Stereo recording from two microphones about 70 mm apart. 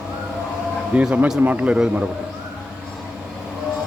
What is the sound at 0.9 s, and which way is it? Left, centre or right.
A man's voice, centre.